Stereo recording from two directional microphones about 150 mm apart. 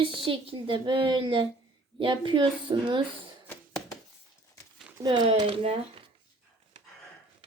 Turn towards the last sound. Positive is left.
turn(degrees=-40)  # may be behind; listen again after turning